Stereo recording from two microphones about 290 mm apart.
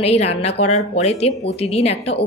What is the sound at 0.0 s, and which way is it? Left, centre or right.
Speech, left.